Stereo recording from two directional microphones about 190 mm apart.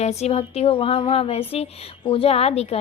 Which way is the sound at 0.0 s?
35° left (ahead or behind).